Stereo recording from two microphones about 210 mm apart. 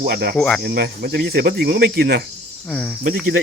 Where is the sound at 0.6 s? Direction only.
50° right (ahead or behind).